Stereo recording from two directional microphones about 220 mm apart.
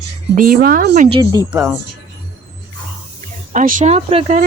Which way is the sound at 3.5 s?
35° right (ahead or behind).